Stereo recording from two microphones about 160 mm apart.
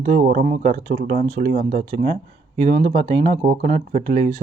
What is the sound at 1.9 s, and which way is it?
Speech, 40° right (ahead or behind).